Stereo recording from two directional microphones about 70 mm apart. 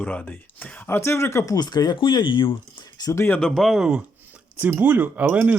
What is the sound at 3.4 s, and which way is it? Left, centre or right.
Speech, centre.